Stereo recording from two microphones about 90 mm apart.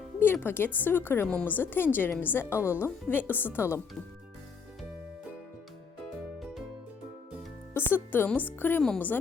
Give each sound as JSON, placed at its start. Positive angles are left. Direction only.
{"t": 0.2, "sound": "a woman's voice", "side_deg": 20}
{"t": 7.7, "sound": "a woman's voice", "side_deg": 25}